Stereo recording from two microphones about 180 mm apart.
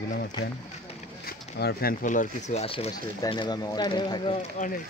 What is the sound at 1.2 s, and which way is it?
Speech, 60° left (ahead or behind).